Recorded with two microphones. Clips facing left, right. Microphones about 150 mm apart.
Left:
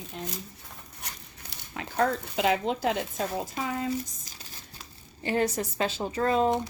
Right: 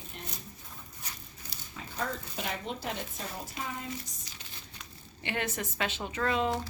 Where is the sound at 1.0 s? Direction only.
75° left (ahead or behind).